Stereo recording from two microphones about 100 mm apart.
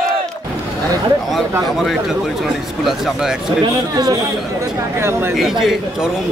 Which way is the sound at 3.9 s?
35° right (ahead or behind).